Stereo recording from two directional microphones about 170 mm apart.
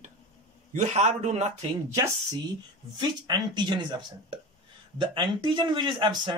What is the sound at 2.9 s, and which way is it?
Speech, 25° right (ahead or behind).